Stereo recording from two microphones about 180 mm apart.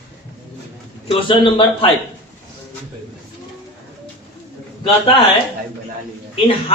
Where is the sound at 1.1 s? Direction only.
30° left (ahead or behind).